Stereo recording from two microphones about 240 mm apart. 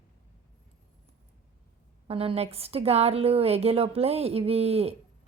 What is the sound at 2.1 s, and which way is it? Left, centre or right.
A woman's voice, right.